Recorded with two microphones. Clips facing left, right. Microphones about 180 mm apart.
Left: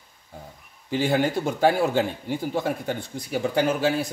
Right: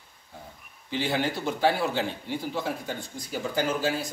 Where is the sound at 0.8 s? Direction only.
45° left (ahead or behind).